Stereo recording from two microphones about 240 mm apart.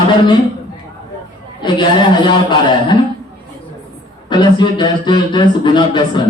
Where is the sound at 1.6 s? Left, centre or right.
Centre.